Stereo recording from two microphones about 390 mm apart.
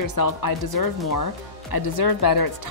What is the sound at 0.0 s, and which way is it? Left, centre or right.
Speech, left.